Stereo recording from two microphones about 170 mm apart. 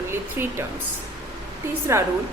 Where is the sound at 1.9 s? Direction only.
15° right (ahead or behind).